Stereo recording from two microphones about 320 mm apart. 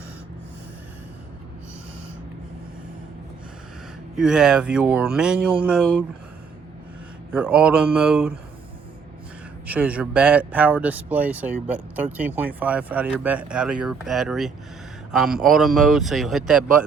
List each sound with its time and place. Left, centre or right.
4.2 s speech: centre
7.3 s speech: centre
9.6 s speech: centre